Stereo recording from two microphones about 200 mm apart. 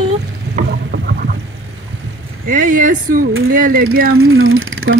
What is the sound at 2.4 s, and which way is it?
Speech, 40° right (ahead or behind).